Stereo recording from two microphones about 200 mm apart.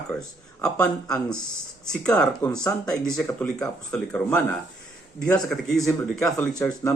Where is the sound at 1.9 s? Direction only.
5° left (ahead or behind).